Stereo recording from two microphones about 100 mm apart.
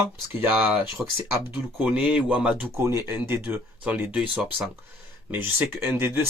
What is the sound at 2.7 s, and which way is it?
Speech, 25° right (ahead or behind).